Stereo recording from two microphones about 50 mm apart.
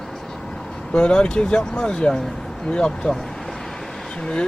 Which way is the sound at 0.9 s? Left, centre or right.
Centre.